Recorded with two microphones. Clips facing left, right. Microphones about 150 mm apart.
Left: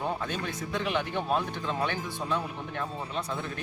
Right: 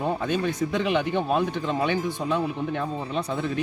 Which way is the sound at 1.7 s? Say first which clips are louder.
Right 6 dB; 15° right (ahead or behind).